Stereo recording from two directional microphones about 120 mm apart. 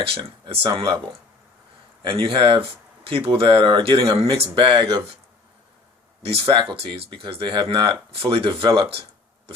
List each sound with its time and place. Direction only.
0.0 s speech: 45° right (ahead or behind)
2.0 s speech: 45° right (ahead or behind)
6.2 s speech: 50° right (ahead or behind)